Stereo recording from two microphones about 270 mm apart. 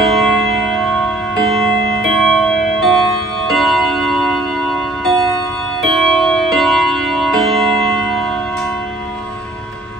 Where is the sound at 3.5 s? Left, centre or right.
Centre.